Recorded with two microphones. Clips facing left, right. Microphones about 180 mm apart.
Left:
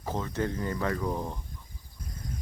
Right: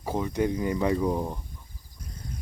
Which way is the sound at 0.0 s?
15° right (ahead or behind).